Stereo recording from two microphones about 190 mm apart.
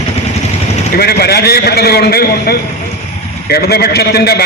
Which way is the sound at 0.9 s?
55° left (ahead or behind).